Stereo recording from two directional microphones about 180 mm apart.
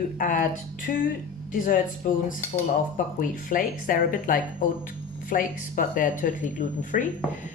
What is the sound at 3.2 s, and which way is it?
Speech, 50° left (ahead or behind).